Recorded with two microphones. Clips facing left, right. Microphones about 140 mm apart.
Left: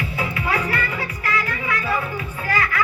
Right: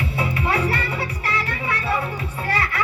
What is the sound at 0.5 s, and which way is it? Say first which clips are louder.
Music: right 1 dB; 30° right (ahead or behind).